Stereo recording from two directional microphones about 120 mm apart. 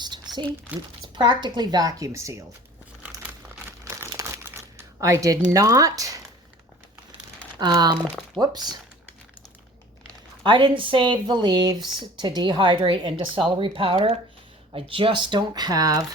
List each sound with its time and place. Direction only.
0.7 s speech: 15° right (ahead or behind)
1.0 s speech: 40° right (ahead or behind)
3.7 s crumpling: 20° right (ahead or behind)
4.9 s speech: 25° right (ahead or behind)
7.6 s speech: 35° right (ahead or behind)
10.4 s a woman's voice: 45° right (ahead or behind)